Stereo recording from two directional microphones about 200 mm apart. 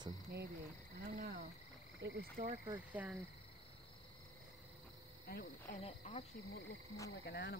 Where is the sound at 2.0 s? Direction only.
55° right (ahead or behind).